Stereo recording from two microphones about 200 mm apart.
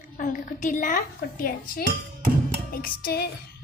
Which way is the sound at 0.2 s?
40° left (ahead or behind).